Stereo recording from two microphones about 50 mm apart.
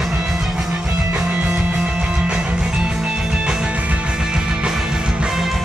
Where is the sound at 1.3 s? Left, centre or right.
Right.